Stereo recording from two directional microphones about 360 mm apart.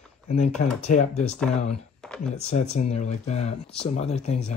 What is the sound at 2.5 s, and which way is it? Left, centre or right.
Speech, centre.